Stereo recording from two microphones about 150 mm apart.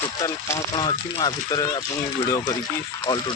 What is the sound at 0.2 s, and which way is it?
Speech, 20° left (ahead or behind).